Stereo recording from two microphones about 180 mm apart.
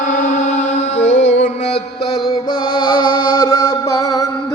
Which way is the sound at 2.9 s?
25° left (ahead or behind).